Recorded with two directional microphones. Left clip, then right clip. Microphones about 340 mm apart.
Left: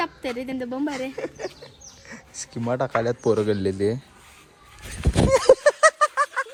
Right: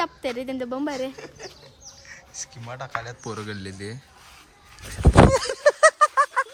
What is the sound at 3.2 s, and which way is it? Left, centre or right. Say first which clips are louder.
Speech: left 13 dB; centre.